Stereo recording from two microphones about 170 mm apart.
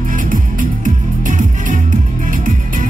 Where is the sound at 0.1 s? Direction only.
50° right (ahead or behind).